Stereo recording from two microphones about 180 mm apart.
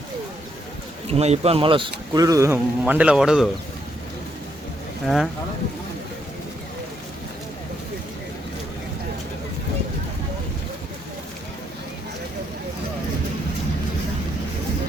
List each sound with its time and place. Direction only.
1.0 s speech: 35° right (ahead or behind); by 3.5 s 5° right (ahead or behind)
5.0 s speech: centre (ahead or behind)